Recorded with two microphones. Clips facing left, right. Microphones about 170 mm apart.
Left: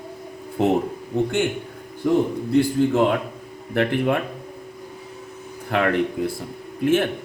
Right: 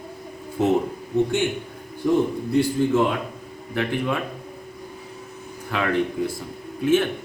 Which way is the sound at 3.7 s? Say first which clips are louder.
Left 4 dB; 60° left (ahead or behind).